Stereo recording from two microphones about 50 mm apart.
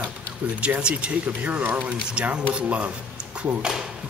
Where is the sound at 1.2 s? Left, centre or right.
Right.